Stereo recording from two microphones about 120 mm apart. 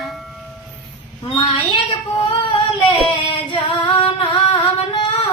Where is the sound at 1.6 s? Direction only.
40° left (ahead or behind).